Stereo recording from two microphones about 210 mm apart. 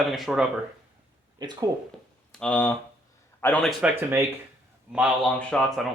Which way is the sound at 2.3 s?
5° left (ahead or behind).